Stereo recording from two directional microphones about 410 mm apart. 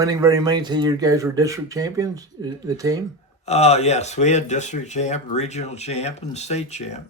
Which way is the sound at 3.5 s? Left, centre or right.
Centre.